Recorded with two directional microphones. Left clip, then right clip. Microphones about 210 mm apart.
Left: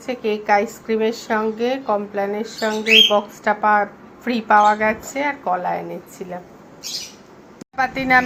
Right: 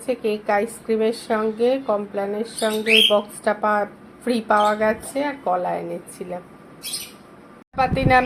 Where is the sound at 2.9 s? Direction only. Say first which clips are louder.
Left 3 dB; 5° left (ahead or behind).